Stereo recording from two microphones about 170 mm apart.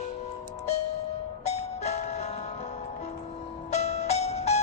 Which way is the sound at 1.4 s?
40° left (ahead or behind).